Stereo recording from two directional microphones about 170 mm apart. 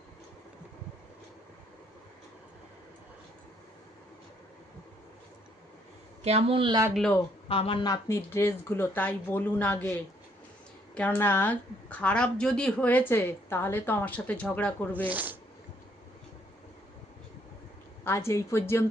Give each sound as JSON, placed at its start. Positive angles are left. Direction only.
{"t": 6.2, "sound": "a woman's voice", "side_deg": -35}
{"t": 6.9, "sound": "speech", "side_deg": 5}
{"t": 7.4, "sound": "speech", "side_deg": 35}
{"t": 8.0, "sound": "a woman's voice", "side_deg": 15}
{"t": 10.9, "sound": "a woman's voice", "side_deg": 10}
{"t": 15.1, "sound": "speech", "side_deg": -10}
{"t": 18.0, "sound": "a woman's voice", "side_deg": 15}